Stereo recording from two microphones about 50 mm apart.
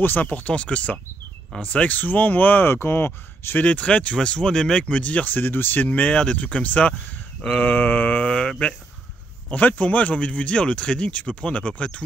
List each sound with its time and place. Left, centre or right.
0.0 s speech: left
2.7 s speech: left
3.6 s speech: left
4.8 s speech: left
5.9 s speech: left
8.2 s mantra: centre
9.5 s speech: left